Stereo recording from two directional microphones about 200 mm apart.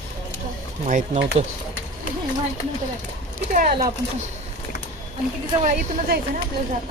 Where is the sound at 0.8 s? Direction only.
35° right (ahead or behind).